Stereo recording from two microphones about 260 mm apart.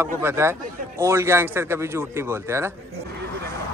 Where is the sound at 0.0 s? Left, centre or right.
Centre.